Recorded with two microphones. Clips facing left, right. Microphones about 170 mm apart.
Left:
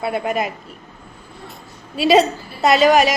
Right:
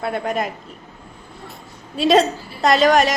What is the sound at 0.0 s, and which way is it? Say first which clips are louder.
Speech: left 1 dB; 5° left (ahead or behind).